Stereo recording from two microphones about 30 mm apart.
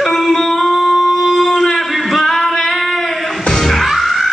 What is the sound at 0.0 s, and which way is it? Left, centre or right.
Singing, centre.